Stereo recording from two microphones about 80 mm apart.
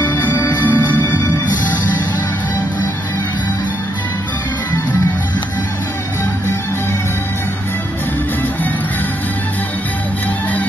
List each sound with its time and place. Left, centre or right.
0.0 s music: left